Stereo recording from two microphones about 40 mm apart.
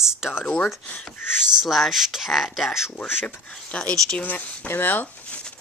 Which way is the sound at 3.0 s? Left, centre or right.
Left.